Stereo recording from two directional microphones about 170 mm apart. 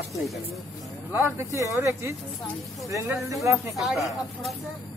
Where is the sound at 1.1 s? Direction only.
15° right (ahead or behind).